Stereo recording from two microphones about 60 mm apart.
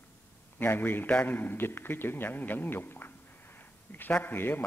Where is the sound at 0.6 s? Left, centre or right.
Left.